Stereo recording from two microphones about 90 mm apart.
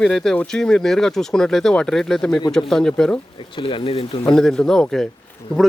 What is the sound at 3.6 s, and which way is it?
Speech, 80° left.